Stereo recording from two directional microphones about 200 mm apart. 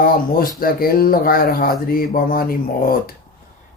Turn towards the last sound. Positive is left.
turn(degrees=45)  # may be behind; listen again after turning